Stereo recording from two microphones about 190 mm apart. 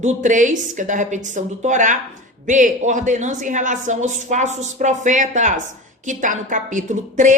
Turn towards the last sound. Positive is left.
turn(degrees=-40)  # may be behind; listen again after turning